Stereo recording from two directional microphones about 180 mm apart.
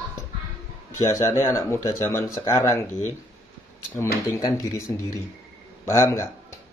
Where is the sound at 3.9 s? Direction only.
15° left (ahead or behind).